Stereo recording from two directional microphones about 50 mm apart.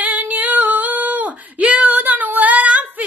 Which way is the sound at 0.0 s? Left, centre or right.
Right.